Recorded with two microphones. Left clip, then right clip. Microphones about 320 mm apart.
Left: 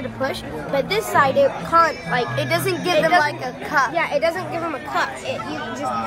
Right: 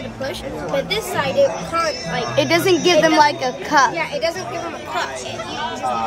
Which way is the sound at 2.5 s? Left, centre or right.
Right.